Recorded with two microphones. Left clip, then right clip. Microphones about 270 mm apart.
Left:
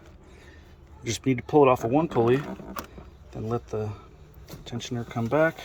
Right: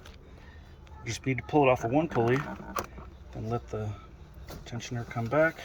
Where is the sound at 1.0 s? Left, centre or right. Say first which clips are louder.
Left 5 dB; left.